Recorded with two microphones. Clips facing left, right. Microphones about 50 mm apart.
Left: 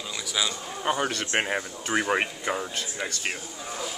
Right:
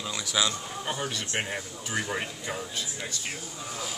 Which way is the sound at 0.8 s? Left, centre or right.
Left.